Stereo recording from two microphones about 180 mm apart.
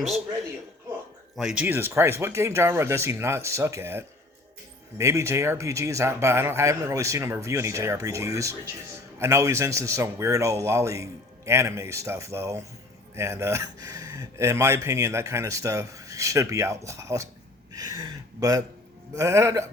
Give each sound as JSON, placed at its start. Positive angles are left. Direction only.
{"t": 1.4, "sound": "speech", "side_deg": -5}
{"t": 17.7, "sound": "a sound", "side_deg": -20}
{"t": 19.1, "sound": "speech", "side_deg": -15}